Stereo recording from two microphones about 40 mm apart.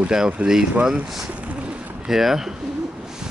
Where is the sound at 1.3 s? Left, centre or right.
Right.